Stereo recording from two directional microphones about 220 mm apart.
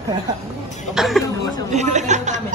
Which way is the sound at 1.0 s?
Centre (ahead or behind).